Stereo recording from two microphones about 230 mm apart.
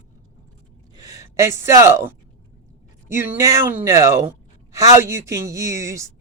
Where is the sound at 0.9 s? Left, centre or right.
Centre.